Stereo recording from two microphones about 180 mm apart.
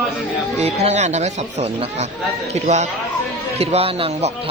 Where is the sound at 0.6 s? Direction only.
35° right (ahead or behind).